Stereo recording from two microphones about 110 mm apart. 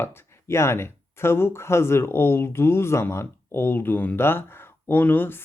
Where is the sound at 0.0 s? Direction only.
25° left (ahead or behind).